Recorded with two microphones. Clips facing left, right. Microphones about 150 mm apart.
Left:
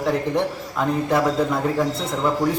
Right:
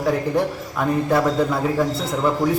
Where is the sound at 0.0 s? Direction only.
5° right (ahead or behind).